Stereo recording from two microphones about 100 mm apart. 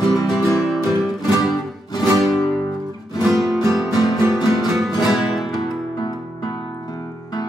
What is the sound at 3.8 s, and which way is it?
Music, 40° left (ahead or behind).